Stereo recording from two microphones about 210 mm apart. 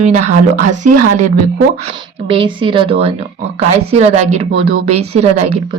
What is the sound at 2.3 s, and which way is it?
Speech, 25° right (ahead or behind).